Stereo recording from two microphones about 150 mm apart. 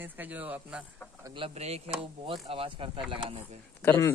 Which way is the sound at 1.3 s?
40° right (ahead or behind).